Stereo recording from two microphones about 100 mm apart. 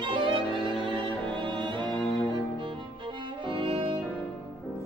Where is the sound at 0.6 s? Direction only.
55° right (ahead or behind).